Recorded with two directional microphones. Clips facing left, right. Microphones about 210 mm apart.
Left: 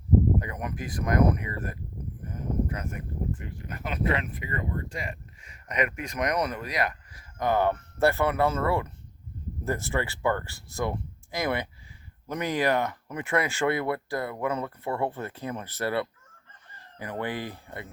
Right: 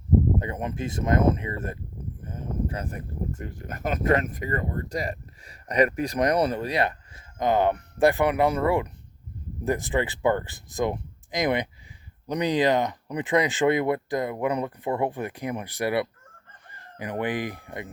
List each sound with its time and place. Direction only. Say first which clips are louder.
0.3 s speech: right 3 dB; 25° right (ahead or behind)